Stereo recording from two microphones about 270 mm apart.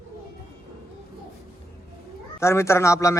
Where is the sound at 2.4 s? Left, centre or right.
Centre.